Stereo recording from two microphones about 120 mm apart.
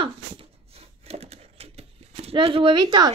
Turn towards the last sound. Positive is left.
turn(degrees=-35)  # may be behind; listen again after turning